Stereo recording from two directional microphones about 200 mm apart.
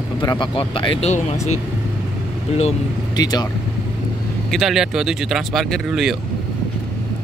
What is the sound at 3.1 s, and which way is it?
Speech, 20° left (ahead or behind).